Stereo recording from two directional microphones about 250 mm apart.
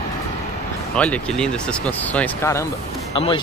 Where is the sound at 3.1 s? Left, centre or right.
Left.